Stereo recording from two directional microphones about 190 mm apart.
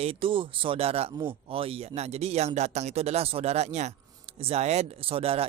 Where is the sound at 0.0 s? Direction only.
30° right (ahead or behind).